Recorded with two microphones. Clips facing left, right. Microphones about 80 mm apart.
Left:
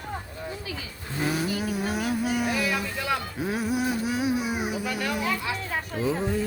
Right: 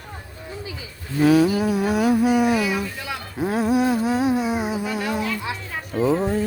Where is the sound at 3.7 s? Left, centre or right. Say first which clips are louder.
Right 8 dB; right.